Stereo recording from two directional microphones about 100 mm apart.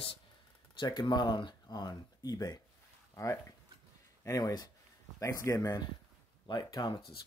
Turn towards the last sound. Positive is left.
turn(degrees=45)  # may be behind; listen again after turning